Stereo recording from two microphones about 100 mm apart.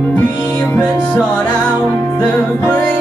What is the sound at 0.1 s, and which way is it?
Music, 15° left (ahead or behind).